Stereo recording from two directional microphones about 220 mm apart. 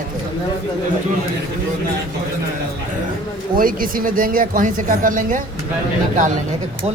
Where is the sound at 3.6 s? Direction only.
40° right (ahead or behind).